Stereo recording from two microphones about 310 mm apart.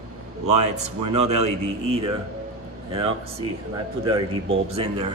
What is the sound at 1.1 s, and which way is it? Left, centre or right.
Speech, right.